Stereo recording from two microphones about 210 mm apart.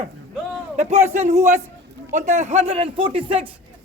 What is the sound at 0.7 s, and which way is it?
A man's voice, 30° right (ahead or behind).